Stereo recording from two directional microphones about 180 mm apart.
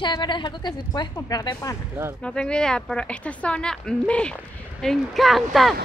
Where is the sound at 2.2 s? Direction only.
5° left (ahead or behind).